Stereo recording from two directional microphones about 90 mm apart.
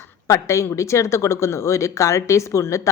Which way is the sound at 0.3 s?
35° left (ahead or behind).